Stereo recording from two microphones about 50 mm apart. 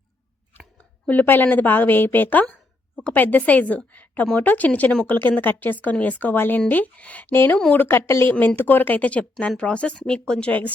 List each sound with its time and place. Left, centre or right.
1.0 s a woman's voice: left
2.9 s a sound: left
3.2 s a woman's voice: left
6.3 s speech: left
6.7 s a woman's voice: left
7.3 s a woman's voice: left; by 10.3 s centre
10.4 s a woman's voice: left